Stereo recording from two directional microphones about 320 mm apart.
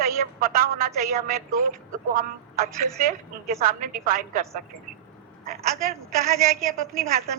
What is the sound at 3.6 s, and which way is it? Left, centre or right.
Speech, right.